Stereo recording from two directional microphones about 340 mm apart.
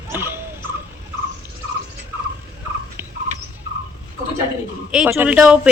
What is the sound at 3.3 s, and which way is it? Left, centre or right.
Rodents, right.